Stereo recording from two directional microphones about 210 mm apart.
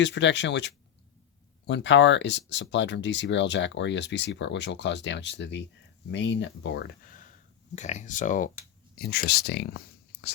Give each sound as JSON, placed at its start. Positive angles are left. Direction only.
{"t": 0.0, "sound": "speech", "side_deg": 60}
{"t": 7.8, "sound": "speech", "side_deg": 35}
{"t": 9.0, "sound": "speech", "side_deg": 50}